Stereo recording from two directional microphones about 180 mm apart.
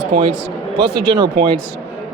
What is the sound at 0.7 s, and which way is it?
Speech, 25° right (ahead or behind).